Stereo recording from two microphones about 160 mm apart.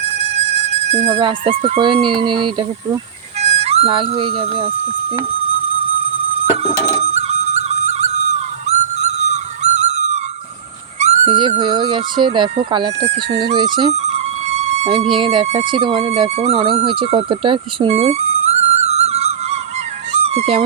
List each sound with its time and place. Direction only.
0.0 s speech: 40° right (ahead or behind)
6.4 s flute: 40° right (ahead or behind)
11.3 s speech: 30° right (ahead or behind)
13.6 s speech: 30° right (ahead or behind)
13.9 s music: 45° right (ahead or behind)
15.4 s speech: 35° right (ahead or behind)
16.8 s music: 30° right (ahead or behind)
20.2 s speech: 40° right (ahead or behind)